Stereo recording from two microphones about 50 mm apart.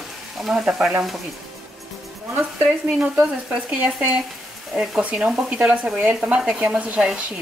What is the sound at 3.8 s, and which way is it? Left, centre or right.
Speech, right.